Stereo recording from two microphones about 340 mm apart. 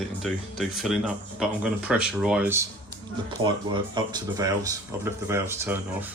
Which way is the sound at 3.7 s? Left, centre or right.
Centre.